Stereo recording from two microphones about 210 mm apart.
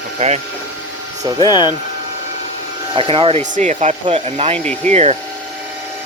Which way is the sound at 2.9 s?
25° right (ahead or behind).